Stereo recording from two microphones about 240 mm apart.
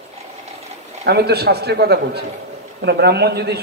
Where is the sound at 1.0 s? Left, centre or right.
Right.